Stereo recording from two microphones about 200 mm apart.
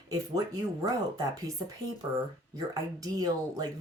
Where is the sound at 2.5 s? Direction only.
20° right (ahead or behind).